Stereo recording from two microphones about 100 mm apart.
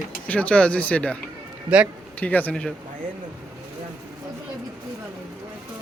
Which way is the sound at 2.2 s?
15° left (ahead or behind).